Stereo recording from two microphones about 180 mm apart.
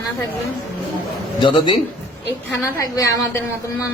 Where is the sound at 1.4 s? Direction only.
25° left (ahead or behind).